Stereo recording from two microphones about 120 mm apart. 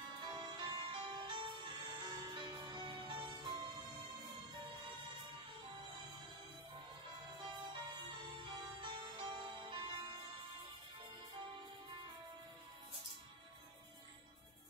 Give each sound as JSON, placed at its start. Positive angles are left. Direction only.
{"t": 0.1, "sound": "music", "side_deg": -35}
{"t": 7.2, "sound": "music", "side_deg": -40}